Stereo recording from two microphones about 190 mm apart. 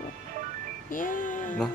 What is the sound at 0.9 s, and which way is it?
Music, 45° left (ahead or behind).